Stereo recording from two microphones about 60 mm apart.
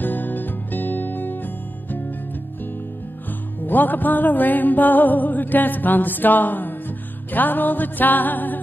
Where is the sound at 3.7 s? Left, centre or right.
Left.